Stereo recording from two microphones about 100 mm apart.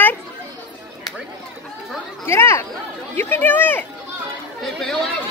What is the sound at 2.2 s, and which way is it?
Speech, 25° left (ahead or behind).